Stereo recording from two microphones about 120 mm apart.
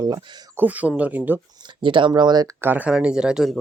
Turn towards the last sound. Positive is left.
turn(degrees=-5)  # may be behind; listen again after turning